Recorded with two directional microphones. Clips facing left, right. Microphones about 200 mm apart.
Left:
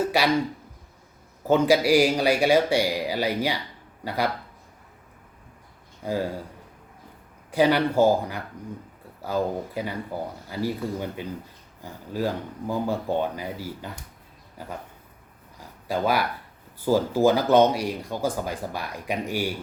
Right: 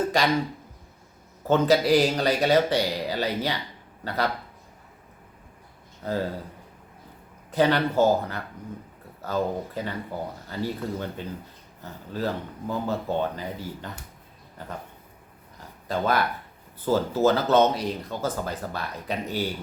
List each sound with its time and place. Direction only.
0.0 s speech: 10° left (ahead or behind)
1.5 s speech: 10° left (ahead or behind)
6.0 s speech: 10° left (ahead or behind)
7.5 s speech: 10° left (ahead or behind)
15.5 s a sound: 10° left (ahead or behind)
16.8 s speech: 10° left (ahead or behind)